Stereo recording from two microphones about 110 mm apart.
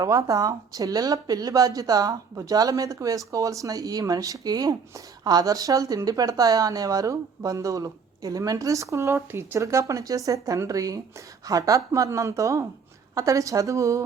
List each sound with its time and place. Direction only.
0.0 s a woman's voice: 30° right (ahead or behind)